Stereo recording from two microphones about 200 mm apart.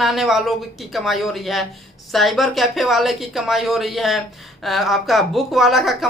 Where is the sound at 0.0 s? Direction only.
Centre (ahead or behind).